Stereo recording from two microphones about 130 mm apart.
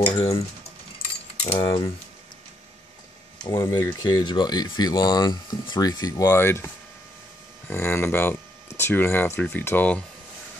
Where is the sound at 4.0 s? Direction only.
30° left (ahead or behind).